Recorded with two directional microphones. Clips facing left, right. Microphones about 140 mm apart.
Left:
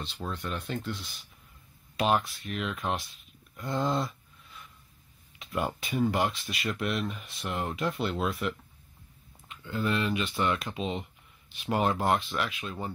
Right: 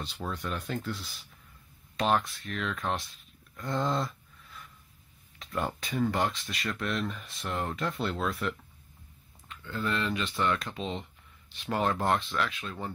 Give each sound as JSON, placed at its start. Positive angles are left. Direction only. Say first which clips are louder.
{"t": 0.0, "sound": "speech", "louder": "even", "side_deg": -10}
{"t": 0.4, "sound": "speech", "louder": "even", "side_deg": 5}
{"t": 2.0, "sound": "speech", "louder": "left 1 dB", "side_deg": 15}
{"t": 2.8, "sound": "speech", "louder": "even", "side_deg": 0}
{"t": 3.5, "sound": "a sound", "louder": "left 1 dB", "side_deg": 5}
{"t": 5.4, "sound": "speech", "louder": "left 1 dB", "side_deg": 10}